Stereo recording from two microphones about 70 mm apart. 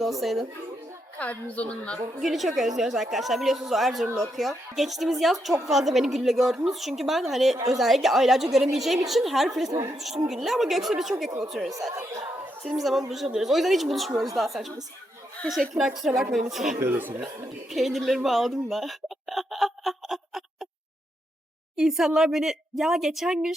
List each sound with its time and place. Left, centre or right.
0.0 s speech: centre
1.5 s a woman's voice: centre
2.2 s speech: centre
9.6 s a woman's voice: right
10.2 s speech: centre
11.7 s speech: right
12.8 s speech: centre
15.8 s speech: centre
16.8 s speech: right
17.7 s speech: centre
21.8 s speech: centre